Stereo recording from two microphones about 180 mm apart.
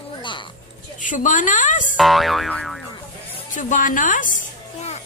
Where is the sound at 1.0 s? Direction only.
45° left (ahead or behind).